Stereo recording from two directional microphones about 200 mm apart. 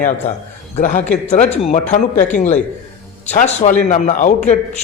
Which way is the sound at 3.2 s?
35° left (ahead or behind).